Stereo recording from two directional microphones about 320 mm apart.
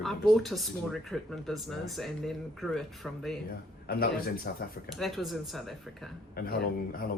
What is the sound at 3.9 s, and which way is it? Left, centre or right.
Speech, left.